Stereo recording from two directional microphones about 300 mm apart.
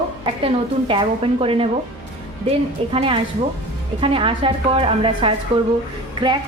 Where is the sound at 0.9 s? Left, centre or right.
Centre.